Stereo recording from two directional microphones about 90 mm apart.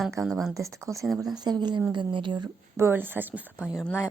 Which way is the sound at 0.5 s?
35° right (ahead or behind).